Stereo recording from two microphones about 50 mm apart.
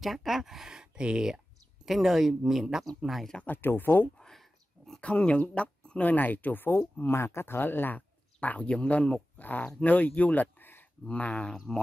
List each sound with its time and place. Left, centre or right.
0.0 s speech: centre
1.9 s speech: centre
3.4 s speech: left
4.2 s a sound: centre
5.0 s speech: left
6.8 s speech: left
9.4 s speech: left
11.1 s speech: left